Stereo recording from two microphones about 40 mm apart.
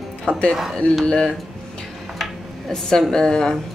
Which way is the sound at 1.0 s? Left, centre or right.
Centre.